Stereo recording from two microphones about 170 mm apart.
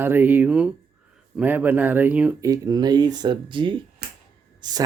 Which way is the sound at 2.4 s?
20° right (ahead or behind).